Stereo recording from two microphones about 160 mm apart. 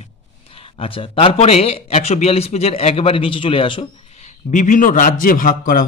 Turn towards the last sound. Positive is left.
turn(degrees=60)  # may be behind; listen again after turning